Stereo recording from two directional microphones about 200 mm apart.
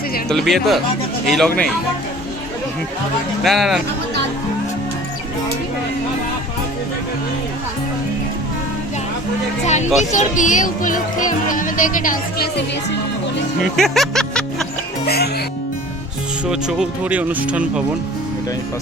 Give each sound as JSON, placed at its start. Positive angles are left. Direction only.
{"t": 0.3, "sound": "speech", "side_deg": 0}
{"t": 3.4, "sound": "speech", "side_deg": 0}
{"t": 9.6, "sound": "speech", "side_deg": 35}
{"t": 13.7, "sound": "music", "side_deg": 0}
{"t": 15.0, "sound": "speech", "side_deg": 50}
{"t": 16.5, "sound": "speech", "side_deg": -5}